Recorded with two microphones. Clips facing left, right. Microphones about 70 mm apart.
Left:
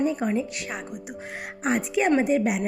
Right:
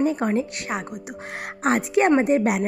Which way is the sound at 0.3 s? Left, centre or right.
Right.